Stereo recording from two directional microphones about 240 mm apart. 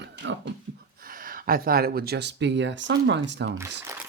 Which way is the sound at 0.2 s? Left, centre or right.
Right.